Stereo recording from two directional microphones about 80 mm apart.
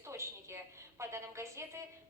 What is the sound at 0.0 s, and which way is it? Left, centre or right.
A woman's voice, right.